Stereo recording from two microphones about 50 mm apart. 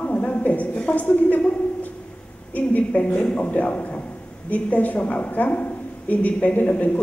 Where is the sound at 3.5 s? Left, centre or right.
Left.